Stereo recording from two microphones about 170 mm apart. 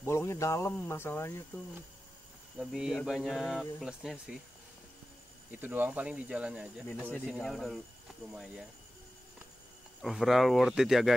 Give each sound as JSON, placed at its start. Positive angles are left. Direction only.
{"t": 0.0, "sound": "speech", "side_deg": 15}
{"t": 2.6, "sound": "speech", "side_deg": -5}
{"t": 5.5, "sound": "speech", "side_deg": -10}
{"t": 6.9, "sound": "speech", "side_deg": 10}
{"t": 10.0, "sound": "speech", "side_deg": 0}